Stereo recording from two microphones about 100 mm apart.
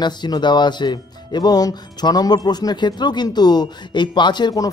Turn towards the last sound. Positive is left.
turn(degrees=40)  # may be behind; listen again after turning